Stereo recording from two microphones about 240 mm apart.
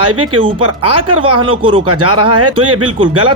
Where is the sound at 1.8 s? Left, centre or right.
Right.